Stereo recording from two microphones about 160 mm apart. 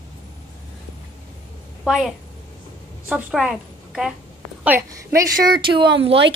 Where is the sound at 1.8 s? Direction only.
5° right (ahead or behind); by 5.9 s 30° right (ahead or behind).